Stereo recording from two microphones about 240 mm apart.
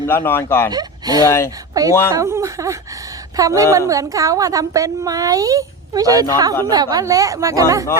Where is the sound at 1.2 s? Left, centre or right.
Centre.